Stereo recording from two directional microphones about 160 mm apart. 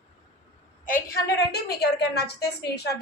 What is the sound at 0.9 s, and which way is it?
A woman's voice, 60° left (ahead or behind).